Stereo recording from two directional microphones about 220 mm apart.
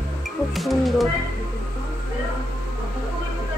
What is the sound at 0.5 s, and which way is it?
Music, centre (ahead or behind).